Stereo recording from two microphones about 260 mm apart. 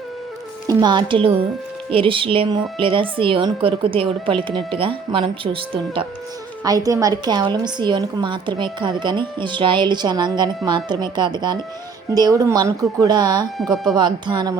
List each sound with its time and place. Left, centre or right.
0.7 s a woman's voice: centre